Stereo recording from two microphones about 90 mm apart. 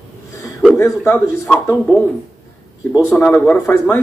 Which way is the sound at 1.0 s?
20° left (ahead or behind).